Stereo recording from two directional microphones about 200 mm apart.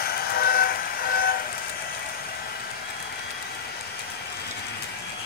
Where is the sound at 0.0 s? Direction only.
50° left (ahead or behind).